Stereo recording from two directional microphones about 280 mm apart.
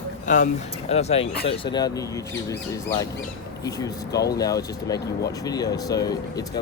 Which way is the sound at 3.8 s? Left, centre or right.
Centre.